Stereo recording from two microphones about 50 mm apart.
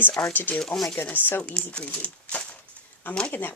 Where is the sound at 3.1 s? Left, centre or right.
Left.